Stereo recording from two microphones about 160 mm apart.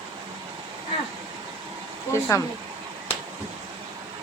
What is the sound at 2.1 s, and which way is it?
Speech, 15° left (ahead or behind).